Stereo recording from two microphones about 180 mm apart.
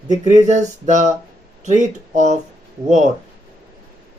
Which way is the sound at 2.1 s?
40° right (ahead or behind).